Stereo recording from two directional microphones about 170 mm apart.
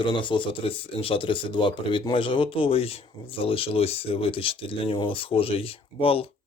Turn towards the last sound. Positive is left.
turn(degrees=35)  # may be behind; listen again after turning